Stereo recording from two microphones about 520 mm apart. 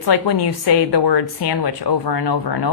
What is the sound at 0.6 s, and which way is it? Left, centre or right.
Speech, left.